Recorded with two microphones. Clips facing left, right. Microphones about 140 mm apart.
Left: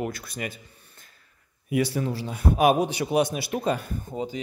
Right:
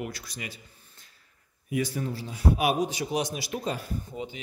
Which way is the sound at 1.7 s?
70° left (ahead or behind).